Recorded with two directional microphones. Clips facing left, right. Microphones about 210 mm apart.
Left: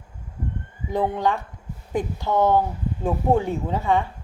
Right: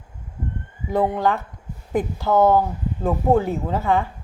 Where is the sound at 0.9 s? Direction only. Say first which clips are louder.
Right 2 dB; centre (ahead or behind).